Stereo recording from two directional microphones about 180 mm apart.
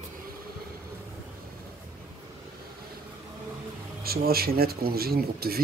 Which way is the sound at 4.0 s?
55° right (ahead or behind).